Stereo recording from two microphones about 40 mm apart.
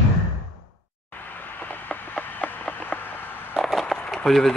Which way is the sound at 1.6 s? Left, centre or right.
Left.